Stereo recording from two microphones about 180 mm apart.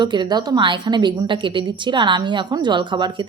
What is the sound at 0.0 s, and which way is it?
A woman's voice, 25° right (ahead or behind).